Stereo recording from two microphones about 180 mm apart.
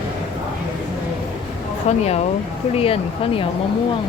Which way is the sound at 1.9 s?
40° left (ahead or behind).